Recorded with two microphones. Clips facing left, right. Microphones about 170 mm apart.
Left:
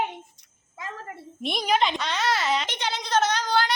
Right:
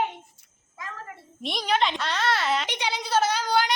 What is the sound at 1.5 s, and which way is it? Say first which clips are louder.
A child's voice: left 1 dB; 10° left (ahead or behind).